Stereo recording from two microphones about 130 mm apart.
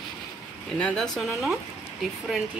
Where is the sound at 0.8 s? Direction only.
10° left (ahead or behind).